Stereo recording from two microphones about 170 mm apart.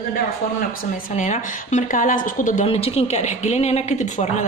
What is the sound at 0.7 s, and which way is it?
A woman's voice, 50° left (ahead or behind).